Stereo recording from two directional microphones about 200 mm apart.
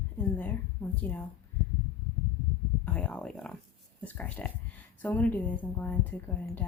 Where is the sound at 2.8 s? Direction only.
5° left (ahead or behind).